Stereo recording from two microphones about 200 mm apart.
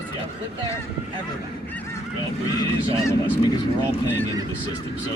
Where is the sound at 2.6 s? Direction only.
20° left (ahead or behind).